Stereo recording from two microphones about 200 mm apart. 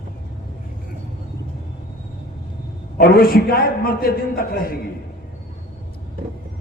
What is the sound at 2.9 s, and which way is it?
A man's voice, 50° left (ahead or behind).